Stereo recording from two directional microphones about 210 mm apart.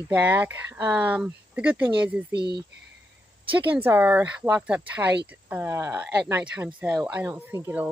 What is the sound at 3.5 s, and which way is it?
Speech, 10° right (ahead or behind).